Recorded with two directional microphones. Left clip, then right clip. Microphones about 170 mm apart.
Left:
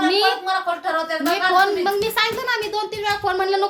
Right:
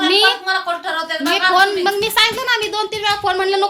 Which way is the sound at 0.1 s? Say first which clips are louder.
Right 8 dB; 10° right (ahead or behind).